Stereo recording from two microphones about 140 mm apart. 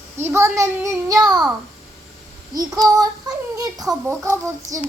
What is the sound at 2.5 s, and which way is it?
A child's voice, 25° right (ahead or behind).